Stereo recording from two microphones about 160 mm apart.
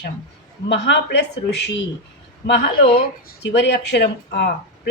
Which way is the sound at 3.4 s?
90° left.